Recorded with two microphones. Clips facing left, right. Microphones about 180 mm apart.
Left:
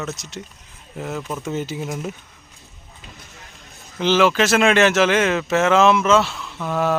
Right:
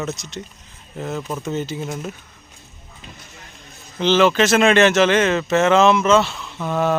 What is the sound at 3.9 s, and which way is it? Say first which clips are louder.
Speech: right 1 dB; 5° left (ahead or behind).